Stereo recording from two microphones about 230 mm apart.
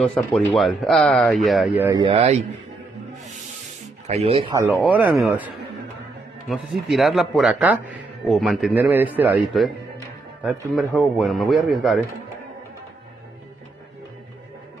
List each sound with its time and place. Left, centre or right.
0.0 s a man's voice: centre
1.9 s speech: right
4.1 s speech: right
4.8 s speech: centre
6.5 s a man's voice: centre
9.9 s music: centre
10.7 s a man's voice: centre